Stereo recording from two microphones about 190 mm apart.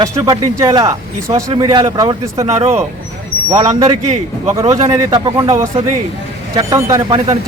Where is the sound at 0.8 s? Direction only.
15° right (ahead or behind).